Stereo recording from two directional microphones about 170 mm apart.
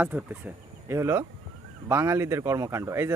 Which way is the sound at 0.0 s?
10° right (ahead or behind).